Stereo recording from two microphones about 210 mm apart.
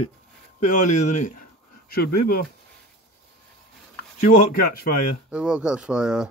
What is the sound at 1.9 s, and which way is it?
Speech, 45° left (ahead or behind).